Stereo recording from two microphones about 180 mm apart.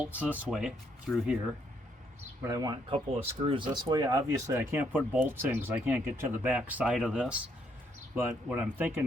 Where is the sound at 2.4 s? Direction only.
20° right (ahead or behind).